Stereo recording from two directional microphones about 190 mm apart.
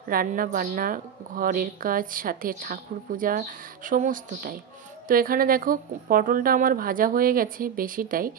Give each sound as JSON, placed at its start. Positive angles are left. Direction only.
{"t": 0.1, "sound": "a woman's voice", "side_deg": -50}